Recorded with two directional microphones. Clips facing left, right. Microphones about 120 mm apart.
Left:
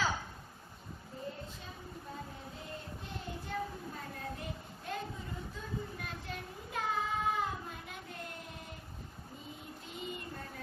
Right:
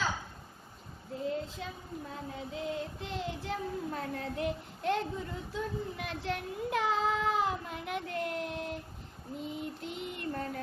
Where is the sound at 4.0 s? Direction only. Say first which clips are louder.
Right 8 dB; 70° right (ahead or behind).